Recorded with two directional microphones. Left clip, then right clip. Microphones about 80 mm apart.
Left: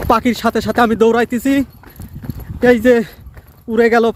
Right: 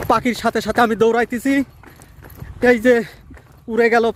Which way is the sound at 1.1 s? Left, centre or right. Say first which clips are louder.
Left 3 dB; left.